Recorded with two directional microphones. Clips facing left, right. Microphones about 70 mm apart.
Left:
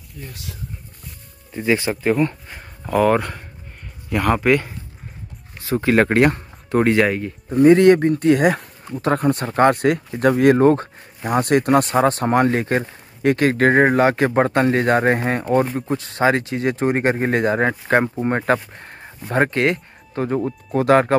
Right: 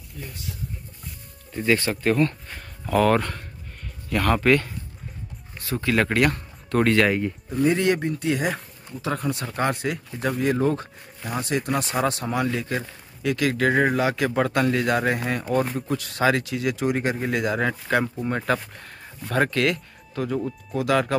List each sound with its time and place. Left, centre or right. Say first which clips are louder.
0.3 s speech: left 1 dB; left
1.5 s speech: left 3 dB; centre
7.1 s speech: left 1 dB; centre
7.6 s speech: left 10 dB; left
11.9 s speech: left 8 dB; left